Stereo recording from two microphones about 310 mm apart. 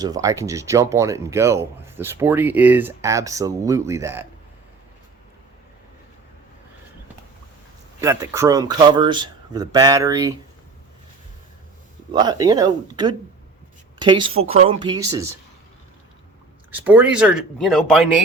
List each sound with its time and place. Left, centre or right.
0.0 s speech: centre
8.0 s speech: centre
12.1 s speech: centre
16.7 s speech: centre